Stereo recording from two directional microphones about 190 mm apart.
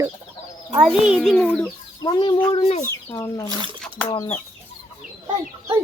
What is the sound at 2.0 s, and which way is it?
Speech, 25° left (ahead or behind).